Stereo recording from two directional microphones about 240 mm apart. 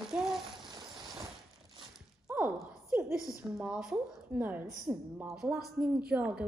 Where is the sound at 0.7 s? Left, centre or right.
Centre.